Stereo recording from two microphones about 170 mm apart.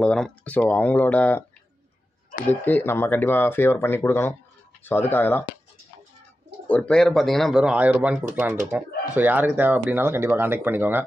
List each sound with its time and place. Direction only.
0.0 s speech: 5° left (ahead or behind)
2.6 s speech: 10° left (ahead or behind)
6.7 s speech: 5° left (ahead or behind); by 11.1 s 10° right (ahead or behind)